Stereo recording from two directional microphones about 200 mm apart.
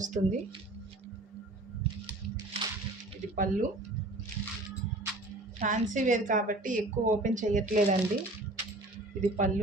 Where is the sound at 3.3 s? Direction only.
40° right (ahead or behind).